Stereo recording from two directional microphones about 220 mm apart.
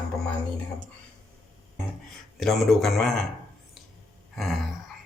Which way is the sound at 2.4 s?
Centre (ahead or behind).